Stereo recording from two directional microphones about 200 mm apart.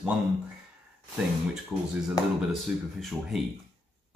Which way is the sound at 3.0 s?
Centre (ahead or behind).